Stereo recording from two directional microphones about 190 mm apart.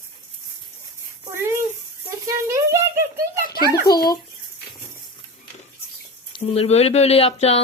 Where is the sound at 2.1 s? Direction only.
15° right (ahead or behind).